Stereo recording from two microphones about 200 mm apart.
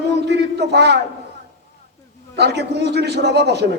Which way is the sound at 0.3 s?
55° right (ahead or behind).